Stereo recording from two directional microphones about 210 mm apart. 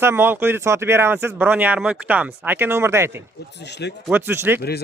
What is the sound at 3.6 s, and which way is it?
Speech, 55° left (ahead or behind).